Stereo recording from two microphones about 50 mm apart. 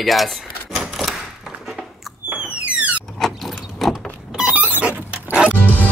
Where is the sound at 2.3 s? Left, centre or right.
Right.